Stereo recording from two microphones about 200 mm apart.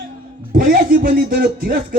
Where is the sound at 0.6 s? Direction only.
45° right (ahead or behind).